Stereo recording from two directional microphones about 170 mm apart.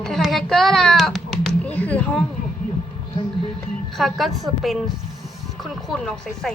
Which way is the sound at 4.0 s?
Centre (ahead or behind).